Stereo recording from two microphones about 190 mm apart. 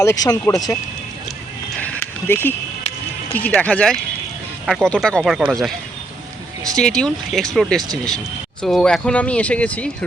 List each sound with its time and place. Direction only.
0.0 s speech: 15° left (ahead or behind)
1.8 s a sound: 10° left (ahead or behind)
3.3 s speech: 10° left (ahead or behind)
6.7 s speech: 5° left (ahead or behind)